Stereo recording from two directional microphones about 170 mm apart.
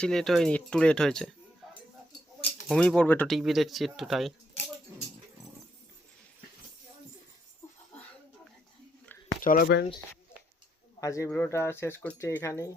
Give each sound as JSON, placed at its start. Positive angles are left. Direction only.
{"t": 0.0, "sound": "speech", "side_deg": 5}
{"t": 2.6, "sound": "speech", "side_deg": 5}
{"t": 9.4, "sound": "speech", "side_deg": 55}
{"t": 11.0, "sound": "speech", "side_deg": 20}